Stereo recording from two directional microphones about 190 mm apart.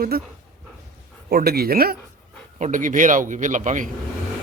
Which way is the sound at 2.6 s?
45° right (ahead or behind).